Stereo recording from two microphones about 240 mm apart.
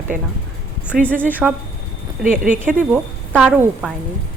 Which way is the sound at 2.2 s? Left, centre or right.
Right.